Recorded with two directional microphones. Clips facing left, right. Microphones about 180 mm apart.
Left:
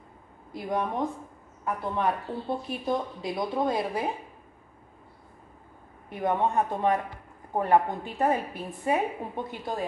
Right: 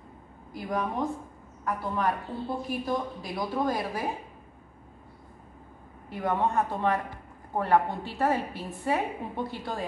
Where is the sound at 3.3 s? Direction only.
20° left (ahead or behind).